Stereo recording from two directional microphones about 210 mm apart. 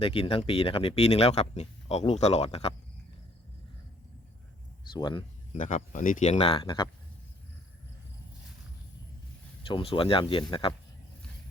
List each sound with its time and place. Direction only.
0.0 s speech: 25° left (ahead or behind)
4.9 s speech: 20° left (ahead or behind)
5.5 s speech: 40° left (ahead or behind)
9.6 s speech: 25° left (ahead or behind)